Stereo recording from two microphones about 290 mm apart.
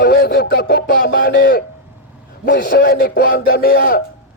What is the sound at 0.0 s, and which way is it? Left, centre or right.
Music, left.